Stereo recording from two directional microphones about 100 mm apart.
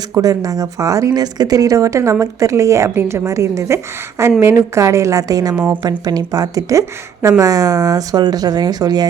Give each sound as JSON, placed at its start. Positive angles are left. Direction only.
{"t": 0.1, "sound": "speech", "side_deg": -35}